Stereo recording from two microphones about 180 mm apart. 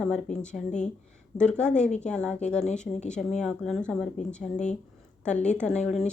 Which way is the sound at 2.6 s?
40° left (ahead or behind).